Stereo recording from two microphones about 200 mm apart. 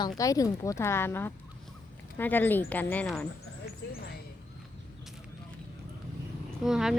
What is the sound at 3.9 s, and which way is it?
Speech, 50° left (ahead or behind).